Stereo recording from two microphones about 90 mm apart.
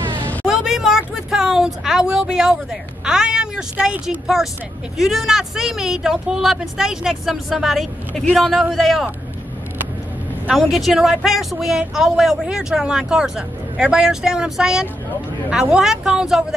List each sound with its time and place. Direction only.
0.5 s a sound: 5° right (ahead or behind)
4.9 s speech: 5° right (ahead or behind)
10.5 s speech: centre (ahead or behind)